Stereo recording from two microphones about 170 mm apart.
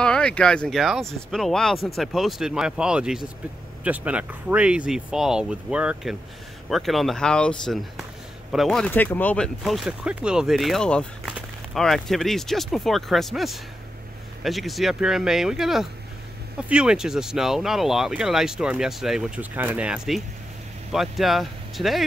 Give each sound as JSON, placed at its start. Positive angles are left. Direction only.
{"t": 0.0, "sound": "speech", "side_deg": 5}